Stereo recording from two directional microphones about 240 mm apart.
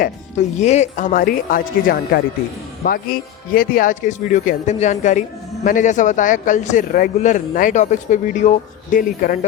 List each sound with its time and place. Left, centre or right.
0.0 s speech: left